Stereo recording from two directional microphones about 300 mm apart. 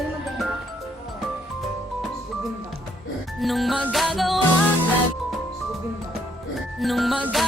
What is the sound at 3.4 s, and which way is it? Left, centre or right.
Music, centre.